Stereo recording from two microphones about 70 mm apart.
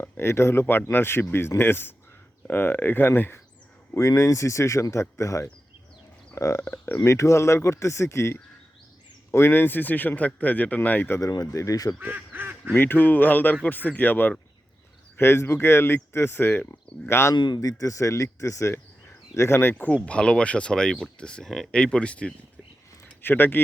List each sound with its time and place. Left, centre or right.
0.0 s speech: left
3.9 s speech: left
6.7 s speech: left
7.0 s speech: left
11.2 s speech: left
11.9 s quack: right
12.7 s speech: left
15.2 s speech: left
17.3 s speech: left
19.4 s speech: left
19.7 s speech: left
23.2 s speech: left